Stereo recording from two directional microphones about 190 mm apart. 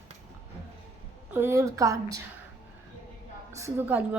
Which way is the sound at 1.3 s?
15° right (ahead or behind).